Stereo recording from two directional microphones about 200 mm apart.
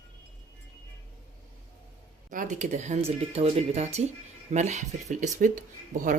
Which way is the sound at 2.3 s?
40° right (ahead or behind).